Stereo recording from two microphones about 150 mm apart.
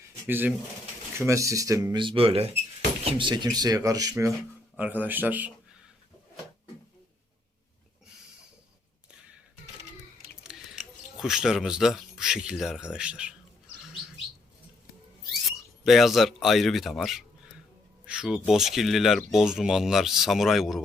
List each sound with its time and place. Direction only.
0.3 s speech: 15° right (ahead or behind)
4.8 s speech: 10° right (ahead or behind)
10.5 s scissors: 5° right (ahead or behind)
11.2 s speech: 5° right (ahead or behind)
15.3 s a sound: centre (ahead or behind)
18.0 s speech: 5° right (ahead or behind)